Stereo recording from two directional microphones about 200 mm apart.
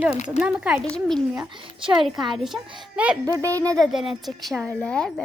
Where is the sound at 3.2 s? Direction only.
15° right (ahead or behind).